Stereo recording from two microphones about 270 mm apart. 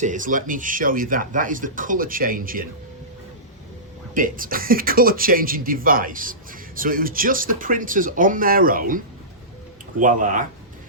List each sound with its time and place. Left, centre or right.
0.0 s speech: right
4.1 s speech: right
10.0 s speech: right